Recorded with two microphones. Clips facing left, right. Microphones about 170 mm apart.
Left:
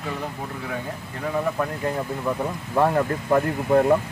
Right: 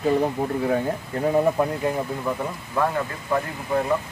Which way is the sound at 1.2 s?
25° right (ahead or behind).